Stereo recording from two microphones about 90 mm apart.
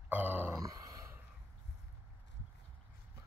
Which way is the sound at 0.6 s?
40° right (ahead or behind).